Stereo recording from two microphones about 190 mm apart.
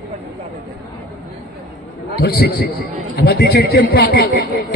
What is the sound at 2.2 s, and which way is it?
A man's voice, 55° left (ahead or behind).